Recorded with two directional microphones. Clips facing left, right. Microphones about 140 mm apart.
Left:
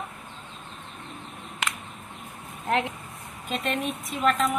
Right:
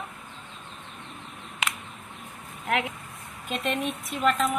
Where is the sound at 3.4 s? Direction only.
Centre (ahead or behind).